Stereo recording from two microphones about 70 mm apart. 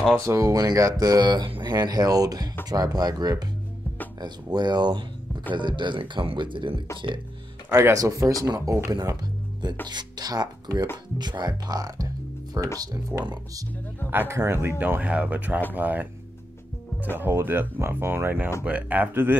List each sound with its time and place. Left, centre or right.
0.2 s speech: right
0.7 s speech: right
1.0 s speech: right
4.2 s speech: right
7.7 s speech: right
8.9 s speech: right
11.1 s speech: right
12.6 s speech: right
14.1 s speech: right
15.0 s speech: centre
17.2 s speech: right